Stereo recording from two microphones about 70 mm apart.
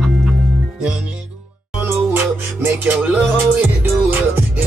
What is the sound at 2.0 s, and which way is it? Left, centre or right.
Music, right.